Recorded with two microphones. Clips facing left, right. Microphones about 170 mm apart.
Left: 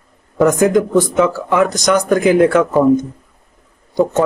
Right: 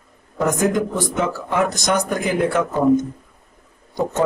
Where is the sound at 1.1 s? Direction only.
90° left.